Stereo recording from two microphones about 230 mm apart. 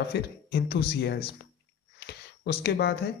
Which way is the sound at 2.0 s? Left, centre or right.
Left.